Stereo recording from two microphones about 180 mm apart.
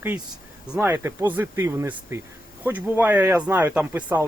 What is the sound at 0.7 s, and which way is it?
Speech, 10° right (ahead or behind).